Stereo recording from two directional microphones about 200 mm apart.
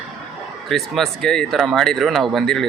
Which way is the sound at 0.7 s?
Centre (ahead or behind).